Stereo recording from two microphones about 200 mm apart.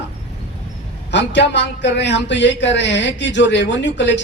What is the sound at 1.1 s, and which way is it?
Speech, 60° left (ahead or behind).